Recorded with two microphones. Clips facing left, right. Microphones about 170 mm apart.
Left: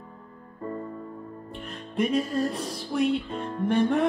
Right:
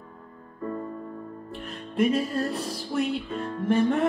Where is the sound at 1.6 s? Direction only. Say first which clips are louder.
Right 3 dB; centre (ahead or behind).